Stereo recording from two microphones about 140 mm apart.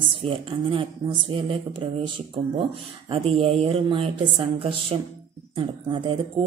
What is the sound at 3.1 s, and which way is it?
Speech, 45° right (ahead or behind).